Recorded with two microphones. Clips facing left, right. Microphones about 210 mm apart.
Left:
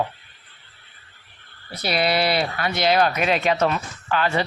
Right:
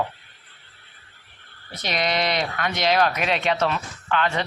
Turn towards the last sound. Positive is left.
turn(degrees=5)  # may be behind; listen again after turning